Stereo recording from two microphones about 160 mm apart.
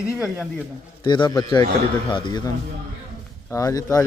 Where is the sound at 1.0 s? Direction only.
30° left (ahead or behind).